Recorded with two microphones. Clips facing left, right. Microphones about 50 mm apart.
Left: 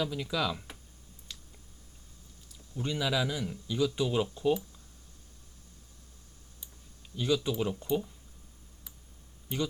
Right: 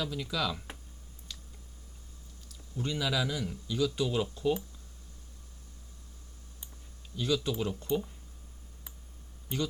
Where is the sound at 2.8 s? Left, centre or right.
Centre.